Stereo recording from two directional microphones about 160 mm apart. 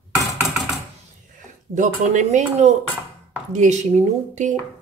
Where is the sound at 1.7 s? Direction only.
50° right (ahead or behind).